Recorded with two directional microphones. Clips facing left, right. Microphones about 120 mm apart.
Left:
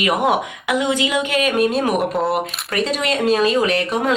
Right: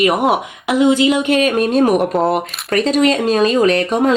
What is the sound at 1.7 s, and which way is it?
Speech, 45° right (ahead or behind).